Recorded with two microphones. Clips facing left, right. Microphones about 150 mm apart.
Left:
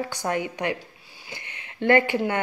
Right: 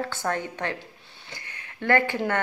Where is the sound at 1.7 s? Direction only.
20° left (ahead or behind).